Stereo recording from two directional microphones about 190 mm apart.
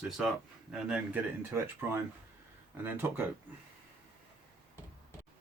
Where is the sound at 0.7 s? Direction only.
5° right (ahead or behind).